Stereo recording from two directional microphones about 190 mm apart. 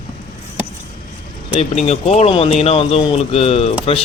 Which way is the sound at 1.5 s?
30° left (ahead or behind).